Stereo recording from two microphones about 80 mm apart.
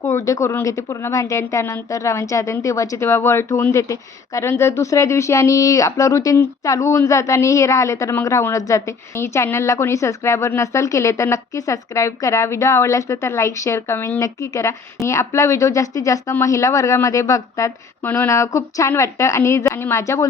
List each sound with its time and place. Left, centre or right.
0.0 s a woman's voice: left
9.1 s a woman's voice: left
18.0 s a sound: left
18.3 s a woman's voice: left